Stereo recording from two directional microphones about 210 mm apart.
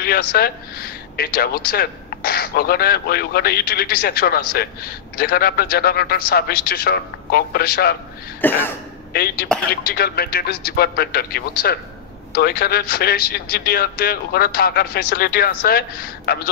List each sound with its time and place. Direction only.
0.0 s speech: 45° left (ahead or behind)
8.4 s cough: 10° left (ahead or behind)
9.1 s speech: 45° left (ahead or behind)